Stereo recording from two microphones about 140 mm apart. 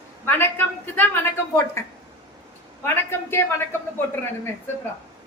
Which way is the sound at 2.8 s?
15° left (ahead or behind).